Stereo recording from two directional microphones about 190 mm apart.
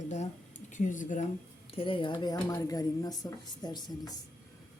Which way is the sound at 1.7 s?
30° left (ahead or behind).